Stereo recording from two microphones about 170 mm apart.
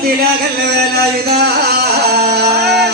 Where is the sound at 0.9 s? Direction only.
70° right (ahead or behind).